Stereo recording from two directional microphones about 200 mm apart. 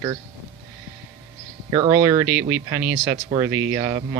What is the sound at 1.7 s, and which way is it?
Speech, 15° right (ahead or behind).